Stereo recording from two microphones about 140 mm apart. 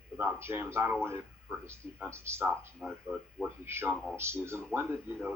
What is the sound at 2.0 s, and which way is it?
Speech, 20° right (ahead or behind).